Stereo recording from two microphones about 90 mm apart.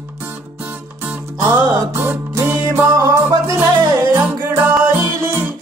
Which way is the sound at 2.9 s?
40° right (ahead or behind).